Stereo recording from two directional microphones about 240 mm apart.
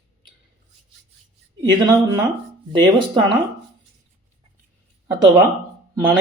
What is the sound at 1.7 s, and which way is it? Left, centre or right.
Speech, centre.